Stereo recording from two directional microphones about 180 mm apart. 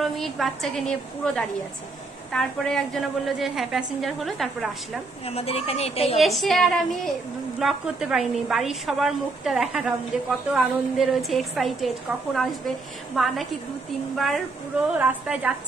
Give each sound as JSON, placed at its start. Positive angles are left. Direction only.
{"t": 0.0, "sound": "a woman's voice", "side_deg": 0}
{"t": 5.2, "sound": "speech", "side_deg": 35}
{"t": 6.1, "sound": "a woman's voice", "side_deg": 0}